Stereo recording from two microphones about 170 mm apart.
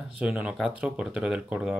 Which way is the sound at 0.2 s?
5° right (ahead or behind).